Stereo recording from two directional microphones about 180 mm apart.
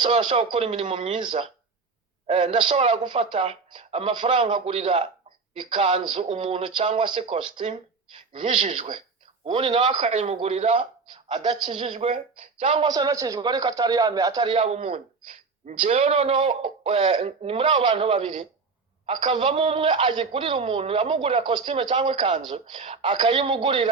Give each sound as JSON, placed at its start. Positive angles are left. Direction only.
{"t": 0.0, "sound": "a man's voice", "side_deg": -35}
{"t": 9.9, "sound": "a man's voice", "side_deg": -40}
{"t": 14.6, "sound": "a man's voice", "side_deg": -35}